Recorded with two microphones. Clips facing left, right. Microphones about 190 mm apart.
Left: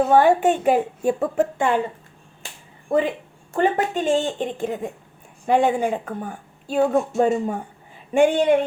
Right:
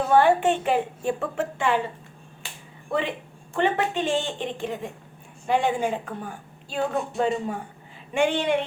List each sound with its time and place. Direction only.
0.1 s a woman's voice: 45° left (ahead or behind)
2.9 s a woman's voice: 50° left (ahead or behind)